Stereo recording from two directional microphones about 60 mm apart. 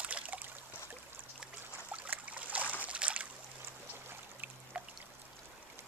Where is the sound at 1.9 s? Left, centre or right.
Right.